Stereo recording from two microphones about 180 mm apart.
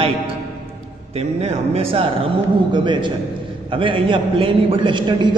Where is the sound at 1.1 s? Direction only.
35° right (ahead or behind).